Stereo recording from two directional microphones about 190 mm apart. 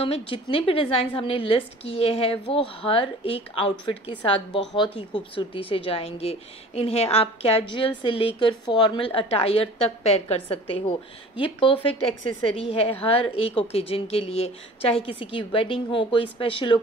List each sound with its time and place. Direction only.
0.0 s a woman's voice: 30° left (ahead or behind)